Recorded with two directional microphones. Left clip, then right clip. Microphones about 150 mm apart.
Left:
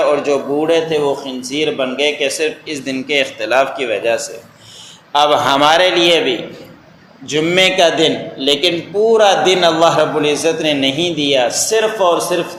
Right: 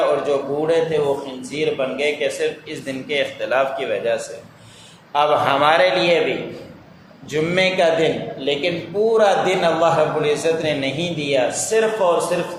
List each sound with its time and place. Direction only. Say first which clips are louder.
0.3 s a man's voice: left 5 dB; 30° left (ahead or behind)
7.3 s a man's voice: left 6 dB; 30° left (ahead or behind)